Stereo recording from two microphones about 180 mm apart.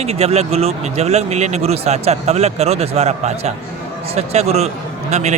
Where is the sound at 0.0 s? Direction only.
35° right (ahead or behind).